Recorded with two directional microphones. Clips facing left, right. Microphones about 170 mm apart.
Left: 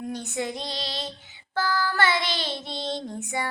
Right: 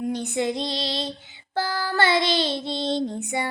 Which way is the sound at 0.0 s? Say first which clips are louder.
Right 5 dB; 20° right (ahead or behind).